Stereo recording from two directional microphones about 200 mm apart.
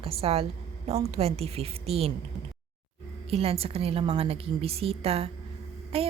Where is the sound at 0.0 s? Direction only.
30° right (ahead or behind).